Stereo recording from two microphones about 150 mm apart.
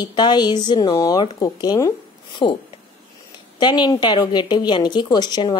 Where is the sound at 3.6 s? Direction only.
30° left (ahead or behind).